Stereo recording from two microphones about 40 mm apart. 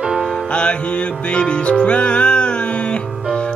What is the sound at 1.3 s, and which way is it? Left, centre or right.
Music, left.